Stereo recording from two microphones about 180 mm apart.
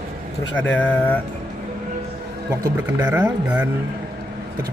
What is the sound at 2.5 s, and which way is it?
Speech, 15° right (ahead or behind).